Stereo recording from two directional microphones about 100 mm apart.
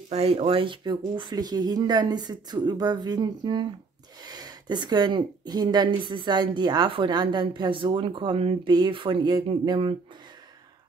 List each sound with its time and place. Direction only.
0.1 s speech: 75° right (ahead or behind); by 8.4 s 50° right (ahead or behind)
8.4 s speech: 65° right (ahead or behind)
8.7 s speech: 50° right (ahead or behind)